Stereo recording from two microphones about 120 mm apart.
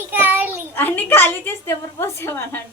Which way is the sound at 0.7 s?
15° left (ahead or behind).